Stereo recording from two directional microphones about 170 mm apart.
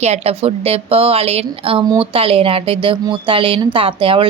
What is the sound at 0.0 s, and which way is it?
A woman's voice, 40° right (ahead or behind).